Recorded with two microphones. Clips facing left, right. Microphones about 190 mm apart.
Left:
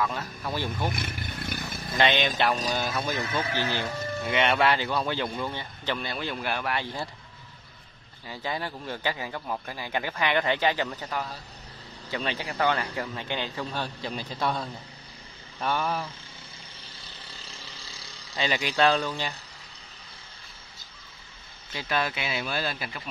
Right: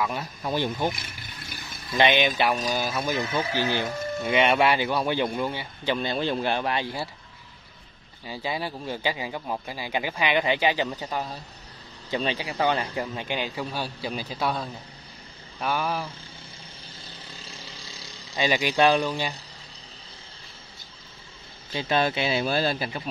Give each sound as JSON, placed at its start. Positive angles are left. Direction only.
{"t": 0.0, "sound": "speech", "side_deg": -15}
{"t": 0.9, "sound": "vehicle", "side_deg": 60}
{"t": 2.0, "sound": "speech", "side_deg": -10}
{"t": 5.9, "sound": "speech", "side_deg": -25}
{"t": 8.3, "sound": "speech", "side_deg": -10}
{"t": 18.3, "sound": "speech", "side_deg": -15}
{"t": 21.7, "sound": "speech", "side_deg": -25}